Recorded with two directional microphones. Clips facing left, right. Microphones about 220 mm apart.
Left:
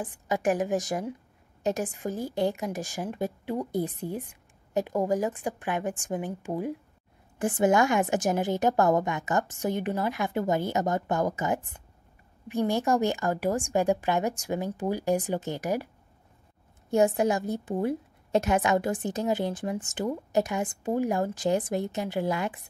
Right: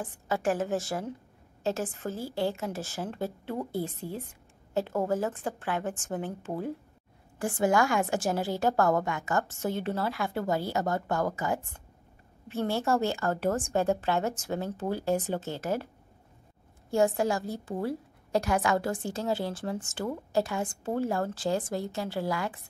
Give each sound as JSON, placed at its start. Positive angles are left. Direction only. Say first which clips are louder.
{"t": 0.0, "sound": "a woman's voice", "louder": "left 2 dB", "side_deg": 15}
{"t": 16.9, "sound": "a woman's voice", "louder": "left 3 dB", "side_deg": 15}